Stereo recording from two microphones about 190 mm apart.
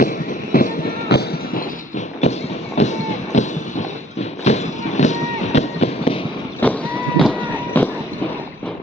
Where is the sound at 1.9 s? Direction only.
35° left (ahead or behind).